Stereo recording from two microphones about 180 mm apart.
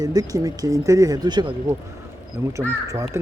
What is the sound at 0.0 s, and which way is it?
Speech, 20° right (ahead or behind).